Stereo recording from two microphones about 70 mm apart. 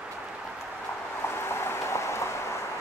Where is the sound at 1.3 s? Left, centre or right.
Left.